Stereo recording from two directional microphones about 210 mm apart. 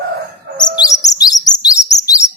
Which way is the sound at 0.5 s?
20° left (ahead or behind).